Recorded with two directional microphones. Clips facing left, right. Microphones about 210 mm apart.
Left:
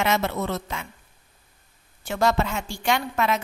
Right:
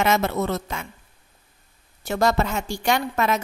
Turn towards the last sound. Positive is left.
turn(degrees=-40)  # may be behind; listen again after turning